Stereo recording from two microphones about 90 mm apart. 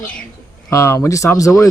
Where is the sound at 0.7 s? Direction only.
35° left (ahead or behind).